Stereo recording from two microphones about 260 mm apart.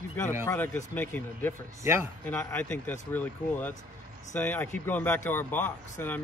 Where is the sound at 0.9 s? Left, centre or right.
Centre.